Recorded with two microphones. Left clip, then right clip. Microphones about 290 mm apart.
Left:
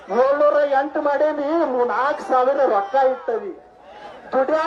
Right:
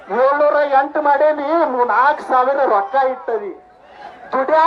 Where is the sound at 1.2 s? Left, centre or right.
Centre.